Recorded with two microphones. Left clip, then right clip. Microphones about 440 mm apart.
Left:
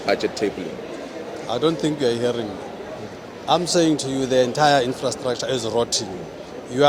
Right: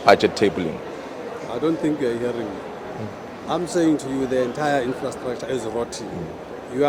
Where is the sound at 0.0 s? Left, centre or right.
Right.